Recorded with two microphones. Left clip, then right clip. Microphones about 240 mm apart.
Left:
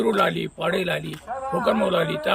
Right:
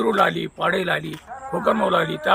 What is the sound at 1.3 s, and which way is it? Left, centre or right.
Speech, left.